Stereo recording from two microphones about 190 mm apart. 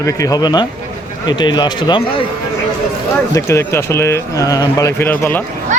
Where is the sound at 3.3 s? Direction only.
15° left (ahead or behind).